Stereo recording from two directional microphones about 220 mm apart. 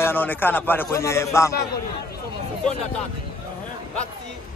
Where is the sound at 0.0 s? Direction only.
10° left (ahead or behind).